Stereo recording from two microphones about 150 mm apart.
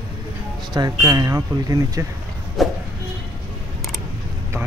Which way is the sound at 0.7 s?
25° right (ahead or behind).